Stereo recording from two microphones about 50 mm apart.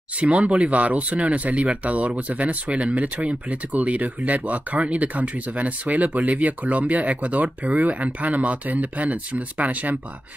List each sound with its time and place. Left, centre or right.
0.2 s speech: right